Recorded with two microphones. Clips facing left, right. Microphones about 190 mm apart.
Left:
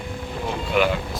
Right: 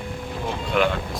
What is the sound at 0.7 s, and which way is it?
Speech, 5° left (ahead or behind).